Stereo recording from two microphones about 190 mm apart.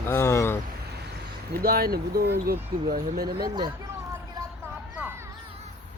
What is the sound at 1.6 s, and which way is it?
Speech, 55° right (ahead or behind).